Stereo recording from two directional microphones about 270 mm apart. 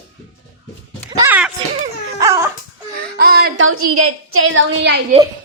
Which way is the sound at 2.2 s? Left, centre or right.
Centre.